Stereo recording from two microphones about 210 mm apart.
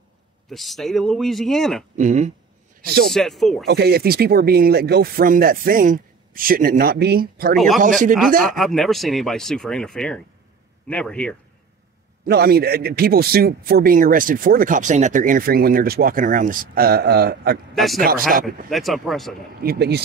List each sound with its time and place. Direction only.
0.5 s speech: centre (ahead or behind)
2.0 s speech: 35° right (ahead or behind)
3.1 s speech: centre (ahead or behind)
3.6 s a man's voice: 50° right (ahead or behind)
7.5 s speech: centre (ahead or behind)
12.3 s a man's voice: 45° right (ahead or behind)
17.7 s speech: centre (ahead or behind)
18.3 s a man's voice: 40° right (ahead or behind)
18.7 s speech: centre (ahead or behind)
19.6 s a man's voice: 50° right (ahead or behind)